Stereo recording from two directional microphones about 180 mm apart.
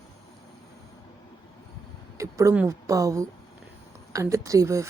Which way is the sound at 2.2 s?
15° right (ahead or behind).